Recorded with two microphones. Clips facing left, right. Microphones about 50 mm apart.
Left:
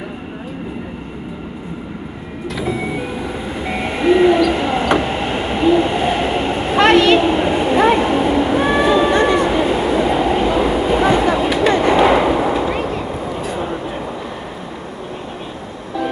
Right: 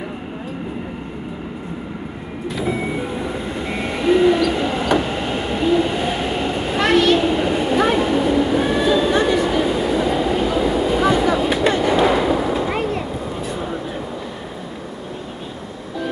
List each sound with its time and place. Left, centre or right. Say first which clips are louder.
3.6 s vehicle: left 5 dB; left
4.0 s a sound: left 3 dB; left
4.5 s train: left 3 dB; left
11.7 s artillery fire: left 6 dB; left
12.8 s vehicle: left 1 dB; left